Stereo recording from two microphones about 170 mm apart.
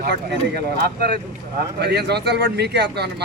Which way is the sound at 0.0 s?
70° right (ahead or behind).